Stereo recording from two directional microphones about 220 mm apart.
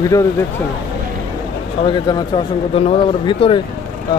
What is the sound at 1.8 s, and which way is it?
Speech, 20° left (ahead or behind).